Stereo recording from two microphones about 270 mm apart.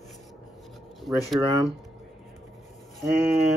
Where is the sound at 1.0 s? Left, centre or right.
Centre.